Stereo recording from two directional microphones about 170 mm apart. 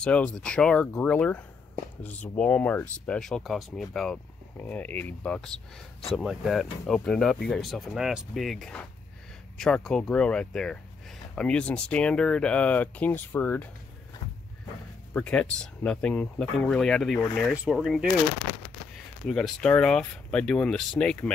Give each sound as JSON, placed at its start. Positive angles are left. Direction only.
{"t": 0.0, "sound": "speech", "side_deg": 5}
{"t": 15.1, "sound": "speech", "side_deg": 5}
{"t": 19.2, "sound": "speech", "side_deg": 5}